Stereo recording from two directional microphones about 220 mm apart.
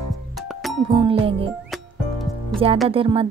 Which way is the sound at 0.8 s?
25° right (ahead or behind).